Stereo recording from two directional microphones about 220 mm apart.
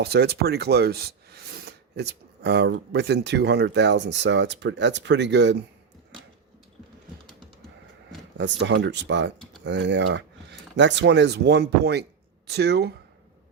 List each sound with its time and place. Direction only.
0.0 s speech: 45° right (ahead or behind)
8.4 s speech: 55° right (ahead or behind)